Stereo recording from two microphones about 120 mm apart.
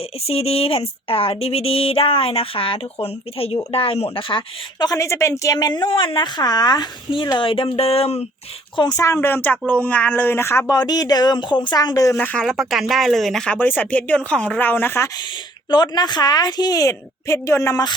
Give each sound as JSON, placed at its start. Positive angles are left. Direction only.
{"t": 0.3, "sound": "speech", "side_deg": 55}
{"t": 8.7, "sound": "speech", "side_deg": 40}
{"t": 9.0, "sound": "speech", "side_deg": 25}
{"t": 10.8, "sound": "speech", "side_deg": 35}
{"t": 12.1, "sound": "speech", "side_deg": 5}
{"t": 13.6, "sound": "speech", "side_deg": 15}
{"t": 15.7, "sound": "speech", "side_deg": 40}